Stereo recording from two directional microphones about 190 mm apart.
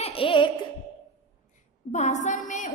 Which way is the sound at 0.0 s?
30° left (ahead or behind).